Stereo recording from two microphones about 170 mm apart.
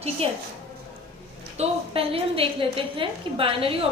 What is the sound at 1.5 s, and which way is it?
A woman's voice, 35° right (ahead or behind).